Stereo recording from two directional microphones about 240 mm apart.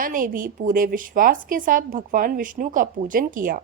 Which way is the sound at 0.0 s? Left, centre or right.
Right.